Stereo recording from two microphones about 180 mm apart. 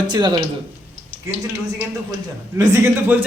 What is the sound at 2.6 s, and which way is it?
Speech, 15° right (ahead or behind).